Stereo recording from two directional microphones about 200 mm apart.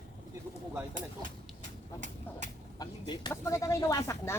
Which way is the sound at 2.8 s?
20° left (ahead or behind).